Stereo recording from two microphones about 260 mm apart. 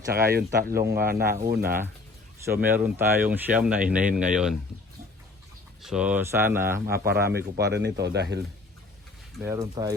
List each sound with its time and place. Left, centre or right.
0.1 s speech: right
2.6 s speech: centre
5.8 s speech: centre
6.8 s speech: right
9.4 s speech: centre